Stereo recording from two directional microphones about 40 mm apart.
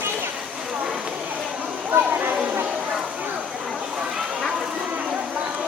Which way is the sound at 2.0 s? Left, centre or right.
Right.